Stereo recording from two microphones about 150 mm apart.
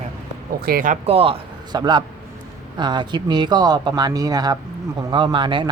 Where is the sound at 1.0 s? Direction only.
40° right (ahead or behind).